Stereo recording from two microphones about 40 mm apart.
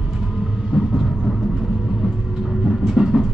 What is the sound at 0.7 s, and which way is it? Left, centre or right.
Vehicle, right.